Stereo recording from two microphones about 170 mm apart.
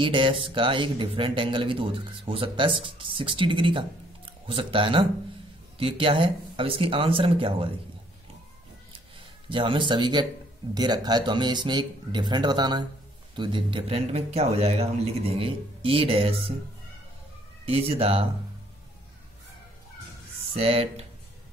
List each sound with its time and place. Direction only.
0.0 s speech: 30° right (ahead or behind)
9.5 s speech: 30° right (ahead or behind)
17.6 s speech: 35° right (ahead or behind)
20.5 s speech: 35° right (ahead or behind)